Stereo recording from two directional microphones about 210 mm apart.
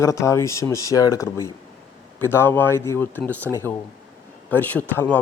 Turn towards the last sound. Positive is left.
turn(degrees=5)  # may be behind; listen again after turning